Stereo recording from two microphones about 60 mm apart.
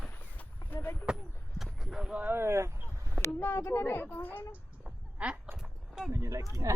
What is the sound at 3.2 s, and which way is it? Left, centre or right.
Speech, left.